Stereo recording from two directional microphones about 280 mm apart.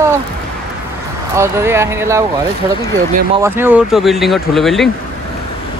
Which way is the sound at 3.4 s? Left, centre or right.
Centre.